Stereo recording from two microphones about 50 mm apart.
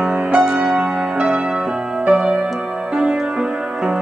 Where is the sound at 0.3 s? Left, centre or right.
Centre.